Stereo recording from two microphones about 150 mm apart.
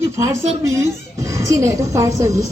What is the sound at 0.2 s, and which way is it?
A woman's voice, 20° right (ahead or behind).